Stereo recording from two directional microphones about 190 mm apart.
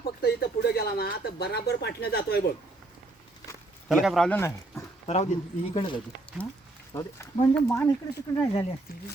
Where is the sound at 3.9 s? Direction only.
Centre (ahead or behind).